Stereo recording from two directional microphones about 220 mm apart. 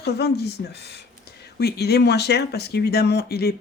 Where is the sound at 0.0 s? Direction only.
50° left (ahead or behind).